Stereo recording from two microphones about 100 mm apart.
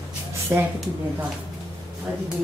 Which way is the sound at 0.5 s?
20° right (ahead or behind).